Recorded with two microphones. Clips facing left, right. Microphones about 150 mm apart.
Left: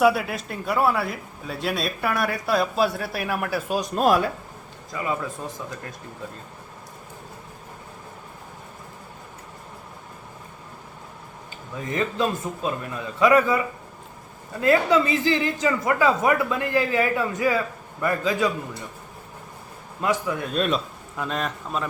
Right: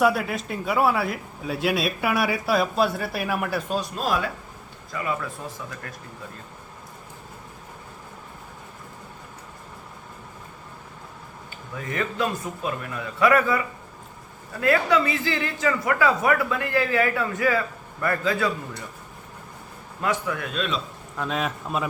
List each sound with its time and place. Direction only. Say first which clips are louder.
0.0 s speech: left 2 dB; centre (ahead or behind)
3.9 s speech: left 8 dB; 50° left (ahead or behind)
4.9 s speech: left 1 dB; 25° left (ahead or behind)
11.8 s speech: left 2 dB; 25° left (ahead or behind)
14.6 s a man's voice: left 2 dB; 20° left (ahead or behind)
20.0 s speech: left 2 dB; 20° left (ahead or behind)
20.4 s speech: left 4 dB; 40° left (ahead or behind)
21.2 s speech: right 1 dB; centre (ahead or behind)